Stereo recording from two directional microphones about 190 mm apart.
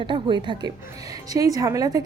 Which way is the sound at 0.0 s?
25° right (ahead or behind).